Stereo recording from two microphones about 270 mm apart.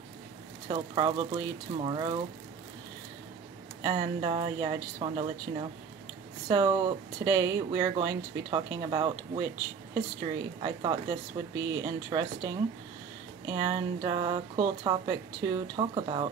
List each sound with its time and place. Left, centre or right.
0.7 s speech: centre
3.8 s speech: centre
10.6 s speech: centre